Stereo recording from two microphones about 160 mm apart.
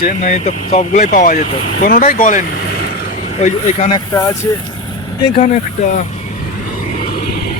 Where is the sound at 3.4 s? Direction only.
40° left (ahead or behind).